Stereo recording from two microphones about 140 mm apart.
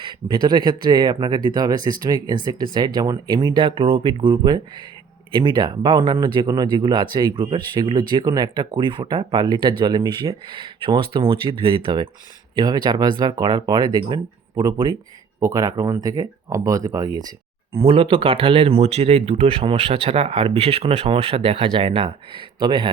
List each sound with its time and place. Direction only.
0.0 s speech: 35° right (ahead or behind)
17.8 s speech: 40° right (ahead or behind)